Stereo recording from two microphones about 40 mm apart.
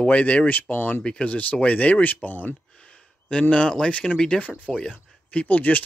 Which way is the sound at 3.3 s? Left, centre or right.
Left.